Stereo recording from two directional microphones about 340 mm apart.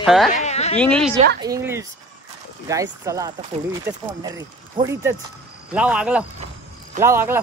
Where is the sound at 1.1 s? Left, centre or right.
Right.